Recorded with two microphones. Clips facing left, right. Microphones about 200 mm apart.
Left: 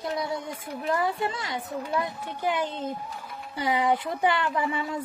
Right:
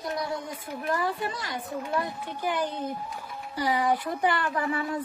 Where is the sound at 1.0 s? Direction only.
25° left (ahead or behind).